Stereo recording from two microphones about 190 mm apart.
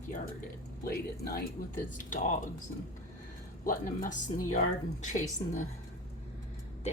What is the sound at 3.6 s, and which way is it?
Speech, 45° left (ahead or behind).